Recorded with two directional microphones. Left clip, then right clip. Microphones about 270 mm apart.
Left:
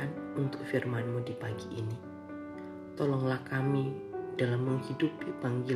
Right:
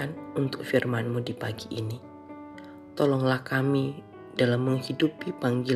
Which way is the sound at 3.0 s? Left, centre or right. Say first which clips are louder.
Right 8 dB; right.